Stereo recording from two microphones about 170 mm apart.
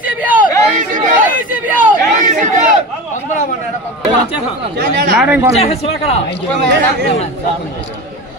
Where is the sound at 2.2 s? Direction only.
45° right (ahead or behind).